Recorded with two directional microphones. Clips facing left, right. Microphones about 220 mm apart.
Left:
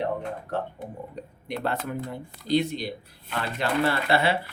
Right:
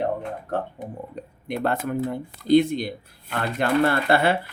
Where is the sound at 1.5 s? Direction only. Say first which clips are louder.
Right 5 dB; 50° right (ahead or behind).